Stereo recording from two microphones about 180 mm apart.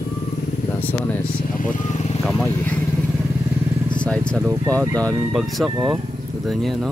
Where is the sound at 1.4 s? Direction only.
45° left (ahead or behind).